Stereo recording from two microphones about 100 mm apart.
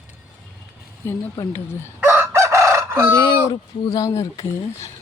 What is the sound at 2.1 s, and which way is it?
Chicken, 25° right (ahead or behind).